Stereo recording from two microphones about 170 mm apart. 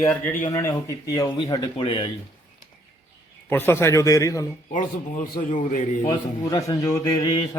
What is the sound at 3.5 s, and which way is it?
Speech, 15° left (ahead or behind).